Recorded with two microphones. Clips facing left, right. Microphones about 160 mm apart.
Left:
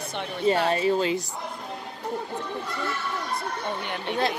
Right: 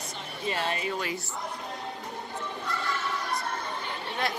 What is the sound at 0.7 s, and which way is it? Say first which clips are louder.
Speech: left 8 dB; 30° left (ahead or behind).